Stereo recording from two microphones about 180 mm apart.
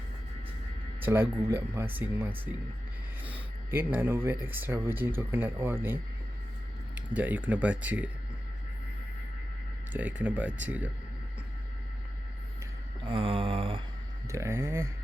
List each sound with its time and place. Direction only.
0.9 s speech: 10° right (ahead or behind)
9.9 s speech: 10° right (ahead or behind)
13.1 s a sound: 30° right (ahead or behind)
14.3 s speech: 15° right (ahead or behind)